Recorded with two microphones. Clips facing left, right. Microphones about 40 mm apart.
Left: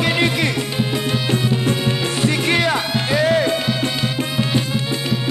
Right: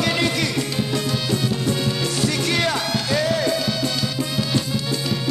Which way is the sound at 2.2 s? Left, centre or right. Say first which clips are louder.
Left 5 dB; left.